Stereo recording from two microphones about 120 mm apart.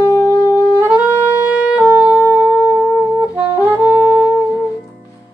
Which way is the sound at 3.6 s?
10° right (ahead or behind).